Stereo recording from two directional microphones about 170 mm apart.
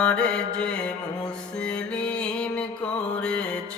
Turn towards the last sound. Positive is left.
turn(degrees=5)  # may be behind; listen again after turning